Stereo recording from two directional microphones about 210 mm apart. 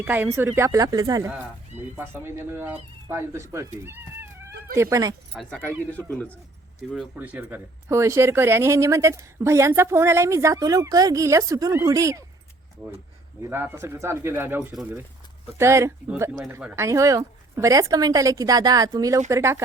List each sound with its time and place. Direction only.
0.0 s speech: 10° right (ahead or behind)
5.3 s speech: centre (ahead or behind)
7.2 s speech: 10° right (ahead or behind)
13.4 s speech: 10° right (ahead or behind)